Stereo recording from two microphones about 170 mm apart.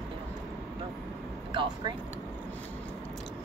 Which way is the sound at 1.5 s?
25° right (ahead or behind).